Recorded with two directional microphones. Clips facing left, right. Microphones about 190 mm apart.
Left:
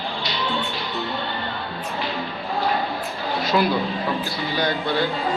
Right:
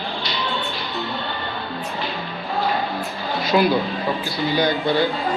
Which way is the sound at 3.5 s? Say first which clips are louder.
Right 3 dB; 15° right (ahead or behind).